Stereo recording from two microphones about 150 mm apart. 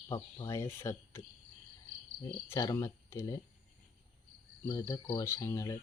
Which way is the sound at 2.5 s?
20° left (ahead or behind).